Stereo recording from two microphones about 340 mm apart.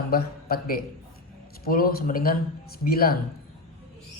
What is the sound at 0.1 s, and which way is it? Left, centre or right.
A man's voice, left.